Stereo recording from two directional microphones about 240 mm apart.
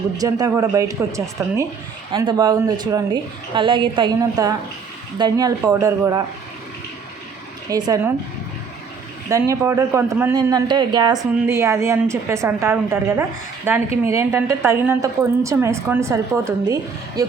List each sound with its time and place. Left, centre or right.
0.2 s a man's voice: centre
7.7 s a man's voice: centre
9.3 s a man's voice: centre